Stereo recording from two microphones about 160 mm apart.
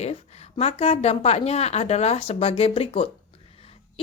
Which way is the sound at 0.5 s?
40° left (ahead or behind).